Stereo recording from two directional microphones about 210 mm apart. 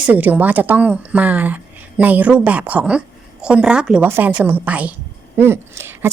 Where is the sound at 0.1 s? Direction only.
10° right (ahead or behind).